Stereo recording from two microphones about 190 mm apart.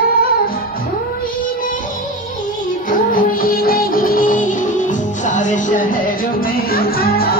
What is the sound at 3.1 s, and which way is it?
Music, 45° left (ahead or behind).